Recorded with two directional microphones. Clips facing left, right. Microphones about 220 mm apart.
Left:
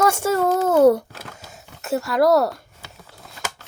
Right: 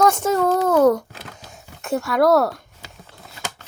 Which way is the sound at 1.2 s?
5° left (ahead or behind).